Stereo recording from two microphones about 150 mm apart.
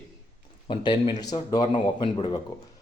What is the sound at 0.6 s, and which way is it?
A man's voice, 30° left (ahead or behind).